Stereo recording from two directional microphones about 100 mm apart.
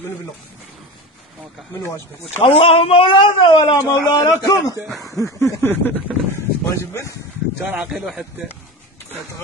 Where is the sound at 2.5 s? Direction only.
80° left; by 3.7 s 60° left (ahead or behind).